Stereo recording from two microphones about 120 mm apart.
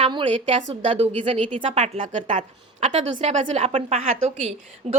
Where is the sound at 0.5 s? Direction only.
60° right (ahead or behind); by 2.4 s 85° right.